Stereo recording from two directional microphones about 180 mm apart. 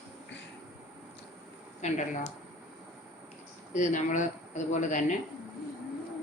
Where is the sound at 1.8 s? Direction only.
40° left (ahead or behind).